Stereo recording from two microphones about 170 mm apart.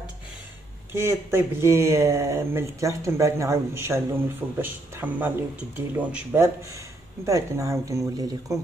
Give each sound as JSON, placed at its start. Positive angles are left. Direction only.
{"t": 0.9, "sound": "speech", "side_deg": -15}